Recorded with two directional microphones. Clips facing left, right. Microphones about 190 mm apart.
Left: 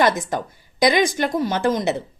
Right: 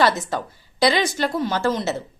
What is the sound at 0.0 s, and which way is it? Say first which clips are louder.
A woman's voice: left 1 dB; 20° left (ahead or behind).